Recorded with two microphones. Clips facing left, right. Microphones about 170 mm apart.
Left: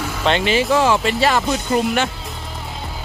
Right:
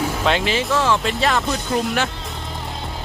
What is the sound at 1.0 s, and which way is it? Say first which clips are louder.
Speech: left 3 dB; centre (ahead or behind).